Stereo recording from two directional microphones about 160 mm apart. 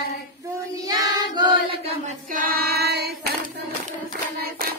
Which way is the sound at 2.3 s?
65° right (ahead or behind).